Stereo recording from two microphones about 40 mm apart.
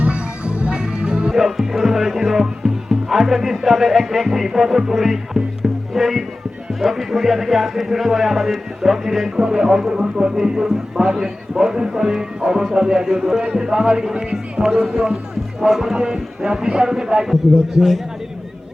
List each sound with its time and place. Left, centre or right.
0.0 s music: right
1.4 s speech: centre
17.7 s speech: centre